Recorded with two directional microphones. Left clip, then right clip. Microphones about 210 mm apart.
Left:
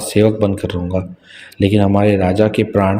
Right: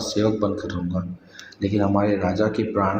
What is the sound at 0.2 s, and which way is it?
Speech, 45° left (ahead or behind).